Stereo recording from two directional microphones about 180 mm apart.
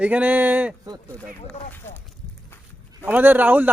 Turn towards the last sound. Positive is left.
turn(degrees=-10)  # may be behind; listen again after turning